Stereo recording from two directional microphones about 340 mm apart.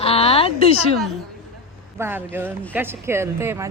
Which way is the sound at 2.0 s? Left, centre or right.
Centre.